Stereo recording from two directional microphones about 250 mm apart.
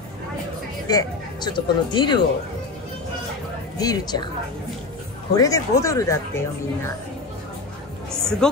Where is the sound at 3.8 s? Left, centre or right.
Centre.